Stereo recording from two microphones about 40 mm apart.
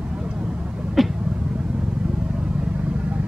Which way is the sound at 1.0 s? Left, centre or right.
Centre.